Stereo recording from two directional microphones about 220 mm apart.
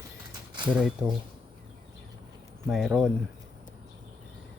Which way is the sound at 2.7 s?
Centre (ahead or behind).